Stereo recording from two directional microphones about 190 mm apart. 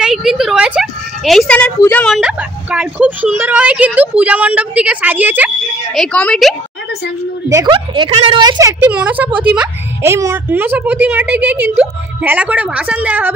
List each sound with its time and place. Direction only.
0.0 s a sound: centre (ahead or behind)
1.8 s a woman's voice: 10° left (ahead or behind); by 5.5 s 10° right (ahead or behind)
5.9 s a woman's voice: 5° left (ahead or behind)
7.4 s a woman's voice: 20° right (ahead or behind)